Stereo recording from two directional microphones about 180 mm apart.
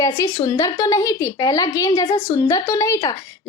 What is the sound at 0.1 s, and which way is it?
A woman's voice, 25° left (ahead or behind).